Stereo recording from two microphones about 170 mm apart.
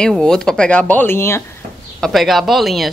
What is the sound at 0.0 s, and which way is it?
Speech, 5° left (ahead or behind).